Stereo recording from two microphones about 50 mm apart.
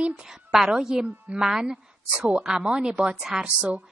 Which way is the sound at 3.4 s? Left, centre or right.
Right.